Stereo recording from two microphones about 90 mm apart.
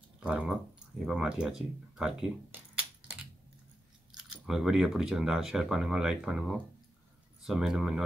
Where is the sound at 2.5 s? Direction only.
15° right (ahead or behind).